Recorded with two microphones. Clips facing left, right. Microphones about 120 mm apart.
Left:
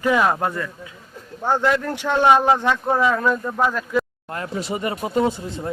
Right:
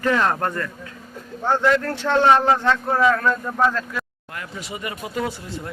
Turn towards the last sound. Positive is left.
turn(degrees=20)  # may be behind; listen again after turning